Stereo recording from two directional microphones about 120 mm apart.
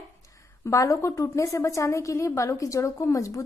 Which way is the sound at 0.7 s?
25° left (ahead or behind).